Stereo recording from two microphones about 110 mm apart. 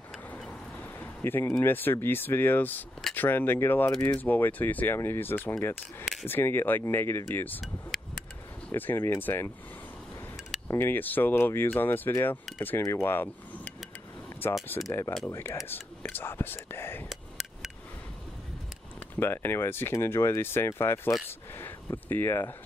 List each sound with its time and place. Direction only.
0.4 s speech: 15° left (ahead or behind)
7.9 s a sound: centre (ahead or behind)
8.7 s speech: 20° left (ahead or behind)
10.7 s speech: 20° left (ahead or behind)
14.9 s speech: 25° left (ahead or behind)
19.1 s speech: 20° left (ahead or behind)